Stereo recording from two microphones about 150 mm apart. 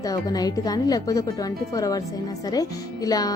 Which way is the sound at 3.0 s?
25° left (ahead or behind).